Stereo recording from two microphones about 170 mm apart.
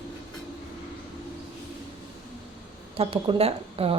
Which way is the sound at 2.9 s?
35° right (ahead or behind).